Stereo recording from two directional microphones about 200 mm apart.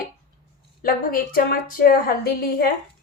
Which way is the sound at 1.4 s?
50° left (ahead or behind).